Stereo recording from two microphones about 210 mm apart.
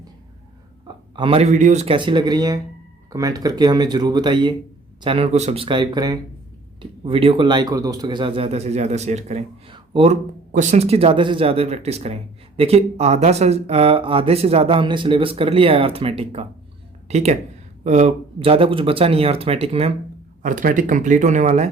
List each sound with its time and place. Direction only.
0.9 s speech: 25° right (ahead or behind)
20.4 s speech: 40° right (ahead or behind)